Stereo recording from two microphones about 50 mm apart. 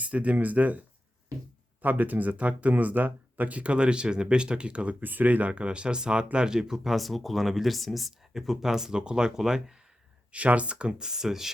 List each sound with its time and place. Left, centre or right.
0.0 s speech: right
1.8 s speech: right; by 6.9 s centre
6.9 s speech: centre
10.3 s speech: right; by 11.5 s centre